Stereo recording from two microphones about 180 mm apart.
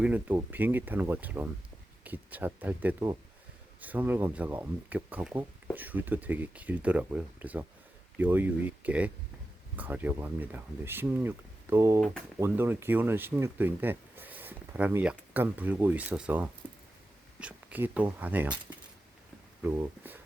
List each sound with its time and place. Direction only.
0.0 s speech: 10° right (ahead or behind)
11.9 s speech: centre (ahead or behind)
12.4 s speech: 15° right (ahead or behind)
19.6 s speech: 15° right (ahead or behind)